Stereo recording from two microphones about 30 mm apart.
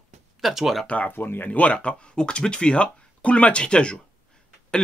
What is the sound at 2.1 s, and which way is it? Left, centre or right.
Speech, left.